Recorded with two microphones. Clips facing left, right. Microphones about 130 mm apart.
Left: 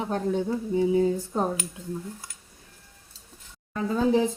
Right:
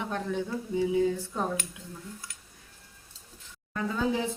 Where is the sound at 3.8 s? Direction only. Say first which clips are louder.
Left 6 dB; 35° left (ahead or behind).